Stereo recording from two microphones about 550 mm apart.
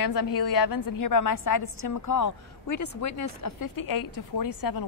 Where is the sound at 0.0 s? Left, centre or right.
Left.